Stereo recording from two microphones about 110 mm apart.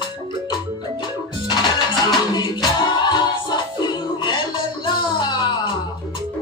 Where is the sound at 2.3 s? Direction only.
40° left (ahead or behind).